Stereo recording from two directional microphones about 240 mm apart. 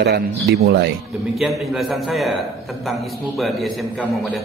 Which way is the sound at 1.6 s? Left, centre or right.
Centre.